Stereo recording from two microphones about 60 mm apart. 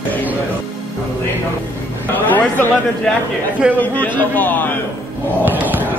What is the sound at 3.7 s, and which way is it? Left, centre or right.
A man's voice, left.